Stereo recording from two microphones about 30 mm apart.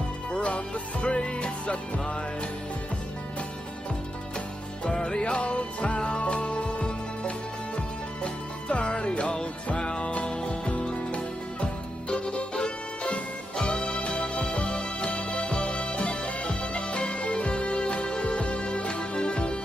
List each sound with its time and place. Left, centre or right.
0.3 s music: left
4.9 s music: left